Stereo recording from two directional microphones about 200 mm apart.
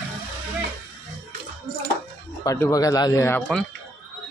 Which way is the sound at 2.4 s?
15° left (ahead or behind).